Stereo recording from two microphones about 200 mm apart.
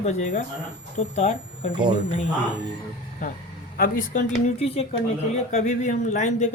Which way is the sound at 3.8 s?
35° left (ahead or behind).